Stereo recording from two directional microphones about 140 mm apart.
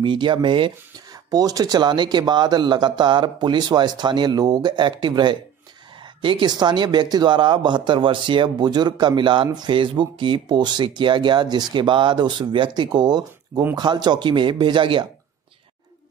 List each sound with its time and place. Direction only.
0.0 s speech: 35° right (ahead or behind)